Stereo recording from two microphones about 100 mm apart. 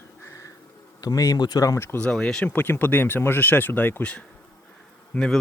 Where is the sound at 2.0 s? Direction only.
10° left (ahead or behind).